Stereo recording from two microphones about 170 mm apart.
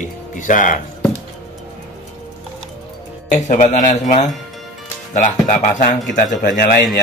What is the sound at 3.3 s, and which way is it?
A man's voice, 45° left (ahead or behind).